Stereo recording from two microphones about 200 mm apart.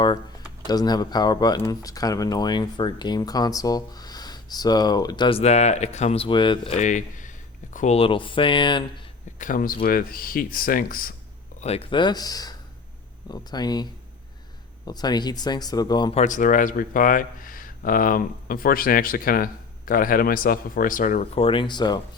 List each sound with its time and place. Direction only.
0.7 s speech: 20° left (ahead or behind)
6.7 s speech: 40° left (ahead or behind)
9.4 s speech: 40° left (ahead or behind)
11.6 s speech: 30° left (ahead or behind)
14.8 s speech: 20° left (ahead or behind)
16.1 s speech: 40° left (ahead or behind)
21.4 s speech: 25° left (ahead or behind)